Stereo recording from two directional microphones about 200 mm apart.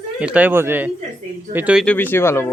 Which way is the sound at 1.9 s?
10° left (ahead or behind).